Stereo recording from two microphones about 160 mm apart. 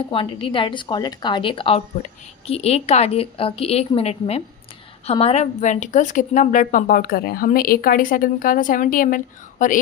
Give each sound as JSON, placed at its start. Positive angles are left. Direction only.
{"t": 0.1, "sound": "a woman's voice", "side_deg": 35}